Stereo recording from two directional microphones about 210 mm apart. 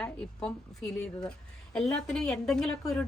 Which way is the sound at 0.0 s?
5° left (ahead or behind).